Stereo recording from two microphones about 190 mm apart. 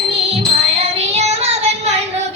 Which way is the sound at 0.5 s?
35° right (ahead or behind).